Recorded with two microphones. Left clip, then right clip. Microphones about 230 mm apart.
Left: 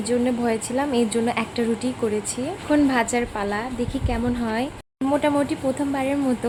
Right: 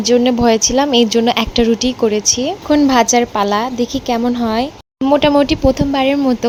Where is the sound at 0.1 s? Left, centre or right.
Right.